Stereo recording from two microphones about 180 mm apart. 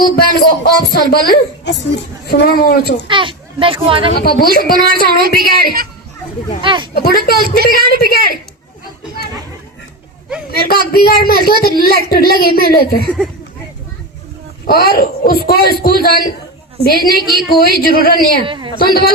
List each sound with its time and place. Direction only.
0.2 s a woman's voice: 60° left (ahead or behind)
3.0 s a child's voice: 25° right (ahead or behind)
4.1 s a woman's voice: 55° left (ahead or behind)
5.4 s a woman's voice: 55° right (ahead or behind)
6.6 s a child's voice: 25° right (ahead or behind)
6.9 s a woman's voice: 60° left (ahead or behind)
10.5 s a woman's voice: 60° left (ahead or behind)
14.7 s a woman's voice: 55° left (ahead or behind)
18.4 s a child's voice: 25° right (ahead or behind)
18.8 s a woman's voice: 60° left (ahead or behind)